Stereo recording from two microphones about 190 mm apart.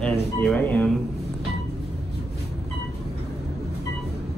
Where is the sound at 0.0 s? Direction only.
5° left (ahead or behind).